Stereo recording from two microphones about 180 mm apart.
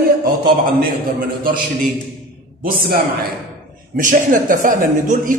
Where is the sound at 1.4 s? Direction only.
50° right (ahead or behind).